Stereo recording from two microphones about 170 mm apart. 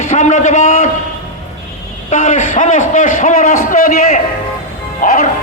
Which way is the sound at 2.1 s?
45° left (ahead or behind).